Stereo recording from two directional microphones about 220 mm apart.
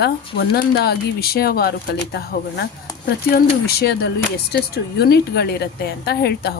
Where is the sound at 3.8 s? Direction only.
45° left (ahead or behind).